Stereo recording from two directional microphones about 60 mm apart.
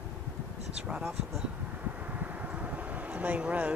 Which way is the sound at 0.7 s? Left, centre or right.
Centre.